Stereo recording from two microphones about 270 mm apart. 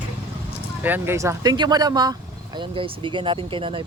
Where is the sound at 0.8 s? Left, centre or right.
Centre.